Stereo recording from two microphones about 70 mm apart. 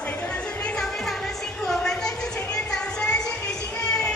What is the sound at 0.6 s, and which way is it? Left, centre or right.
Music, centre.